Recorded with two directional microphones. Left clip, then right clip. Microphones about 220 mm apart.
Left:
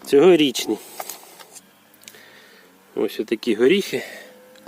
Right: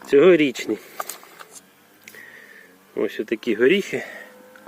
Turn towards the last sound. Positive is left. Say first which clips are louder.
# left 1 dB
turn(degrees=15)  # may be behind; listen again after turning